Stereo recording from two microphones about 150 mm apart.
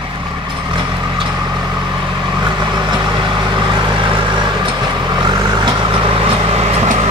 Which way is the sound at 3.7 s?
35° right (ahead or behind).